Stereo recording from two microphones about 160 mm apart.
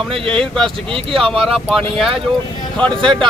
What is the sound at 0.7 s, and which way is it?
Speech, 35° right (ahead or behind).